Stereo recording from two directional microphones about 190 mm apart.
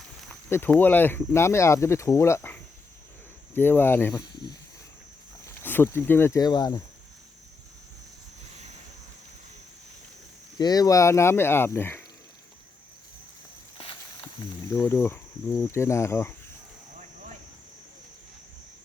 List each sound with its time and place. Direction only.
0.5 s speech: 10° left (ahead or behind)
5.5 s speech: 10° left (ahead or behind)
10.6 s speech: 20° left (ahead or behind)
13.7 s snake: 30° left (ahead or behind)
14.8 s speech: 15° left (ahead or behind)